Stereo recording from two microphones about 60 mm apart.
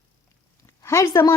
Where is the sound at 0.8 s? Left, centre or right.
Left.